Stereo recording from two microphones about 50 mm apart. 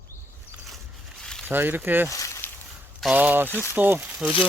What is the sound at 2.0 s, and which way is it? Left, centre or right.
Speech, left.